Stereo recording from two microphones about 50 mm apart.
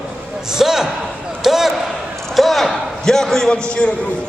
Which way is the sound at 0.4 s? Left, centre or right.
Centre.